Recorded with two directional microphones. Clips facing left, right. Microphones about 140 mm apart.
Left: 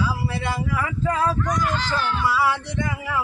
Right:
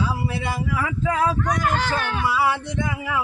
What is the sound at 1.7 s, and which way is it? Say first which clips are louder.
Speech: right 1 dB; 55° right (ahead or behind).